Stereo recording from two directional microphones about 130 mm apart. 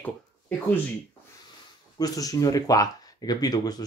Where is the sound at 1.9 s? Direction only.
30° left (ahead or behind).